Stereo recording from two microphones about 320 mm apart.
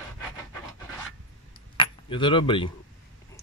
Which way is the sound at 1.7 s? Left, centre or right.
Centre.